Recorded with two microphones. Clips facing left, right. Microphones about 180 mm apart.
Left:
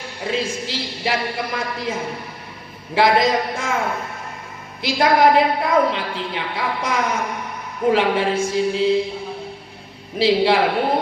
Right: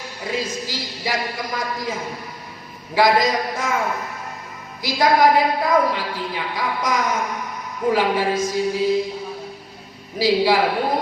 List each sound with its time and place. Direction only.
0.2 s a woman's voice: 25° left (ahead or behind)
4.8 s a woman's voice: 25° left (ahead or behind)
10.2 s a woman's voice: 25° left (ahead or behind)